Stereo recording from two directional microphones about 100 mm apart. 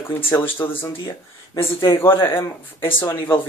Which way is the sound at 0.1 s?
20° left (ahead or behind).